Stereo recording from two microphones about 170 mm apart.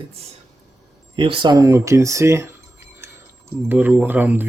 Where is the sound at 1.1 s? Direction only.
30° right (ahead or behind).